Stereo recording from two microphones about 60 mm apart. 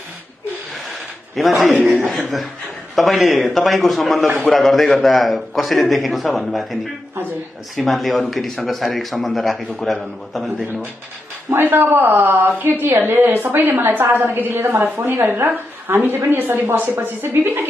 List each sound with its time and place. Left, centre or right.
1.4 s a man's voice: centre
1.8 s a man's voice: right
2.0 s a man's voice: centre
11.5 s a woman's voice: right